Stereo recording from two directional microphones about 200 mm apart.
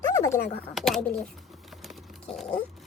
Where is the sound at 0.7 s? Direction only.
Centre (ahead or behind).